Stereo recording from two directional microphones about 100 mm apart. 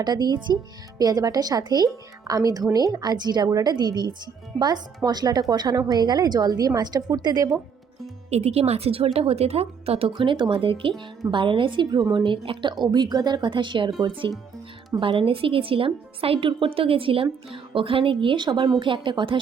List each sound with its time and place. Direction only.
0.0 s a woman's voice: 45° right (ahead or behind)
8.3 s a woman's voice: 90° right
10.1 s a woman's voice: 55° right (ahead or behind)
14.9 s a woman's voice: 65° right (ahead or behind)